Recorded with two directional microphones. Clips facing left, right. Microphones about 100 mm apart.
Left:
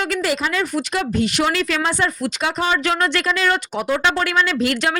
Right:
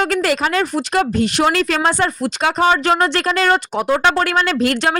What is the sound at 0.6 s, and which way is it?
Speech, 35° right (ahead or behind).